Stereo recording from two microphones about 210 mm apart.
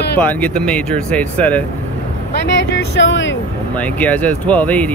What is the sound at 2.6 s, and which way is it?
Speech, 60° left (ahead or behind).